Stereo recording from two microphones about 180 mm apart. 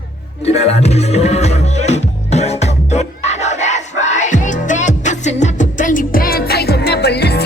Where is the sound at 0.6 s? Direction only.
35° left (ahead or behind).